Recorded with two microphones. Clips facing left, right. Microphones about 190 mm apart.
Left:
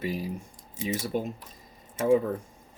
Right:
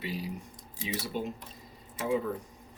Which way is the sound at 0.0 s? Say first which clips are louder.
Left 5 dB; 50° left (ahead or behind).